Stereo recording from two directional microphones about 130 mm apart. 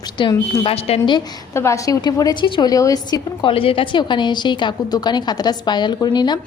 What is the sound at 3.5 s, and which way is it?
A woman's voice, 45° left (ahead or behind).